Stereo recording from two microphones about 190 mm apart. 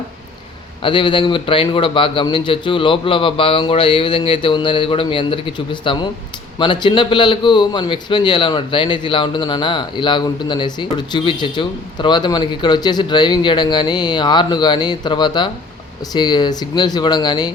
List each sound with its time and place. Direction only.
0.8 s a man's voice: 25° left (ahead or behind)